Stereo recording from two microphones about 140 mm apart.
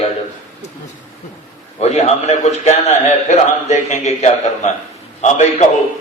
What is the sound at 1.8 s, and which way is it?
A man's voice, 50° left (ahead or behind).